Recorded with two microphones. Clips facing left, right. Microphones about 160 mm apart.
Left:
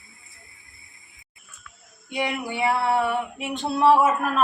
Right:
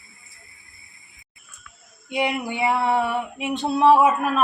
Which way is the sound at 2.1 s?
15° right (ahead or behind).